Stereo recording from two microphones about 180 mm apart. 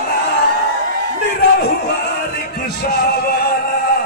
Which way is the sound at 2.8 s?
60° left (ahead or behind).